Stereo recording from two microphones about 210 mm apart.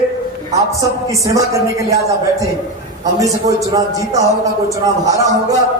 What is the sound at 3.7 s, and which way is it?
Speech, 15° right (ahead or behind).